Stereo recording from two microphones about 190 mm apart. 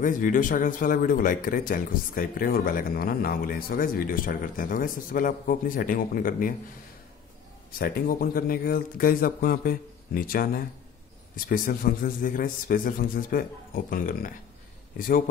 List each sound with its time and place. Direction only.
0.0 s speech: 45° left (ahead or behind)
7.8 s speech: 50° left (ahead or behind)